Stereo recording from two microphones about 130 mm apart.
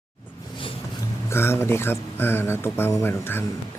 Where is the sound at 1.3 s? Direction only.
20° left (ahead or behind).